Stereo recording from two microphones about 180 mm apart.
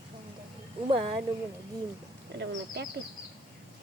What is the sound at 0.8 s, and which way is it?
Speech, 30° right (ahead or behind).